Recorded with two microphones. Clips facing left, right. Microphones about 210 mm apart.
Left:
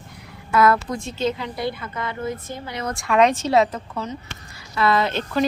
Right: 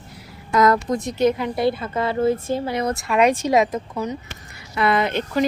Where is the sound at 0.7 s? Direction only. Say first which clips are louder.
Right 2 dB; 40° right (ahead or behind).